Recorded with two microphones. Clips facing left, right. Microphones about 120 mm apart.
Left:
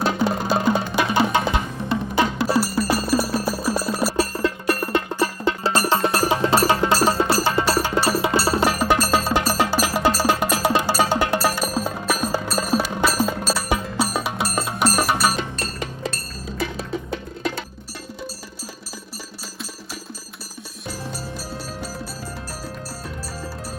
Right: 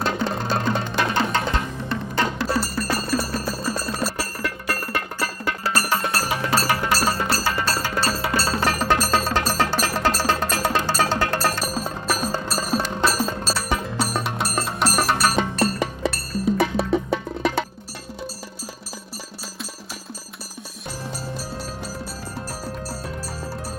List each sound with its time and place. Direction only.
0.0 s music: 5° left (ahead or behind)
4.2 s music: 20° left (ahead or behind); by 15.4 s centre (ahead or behind)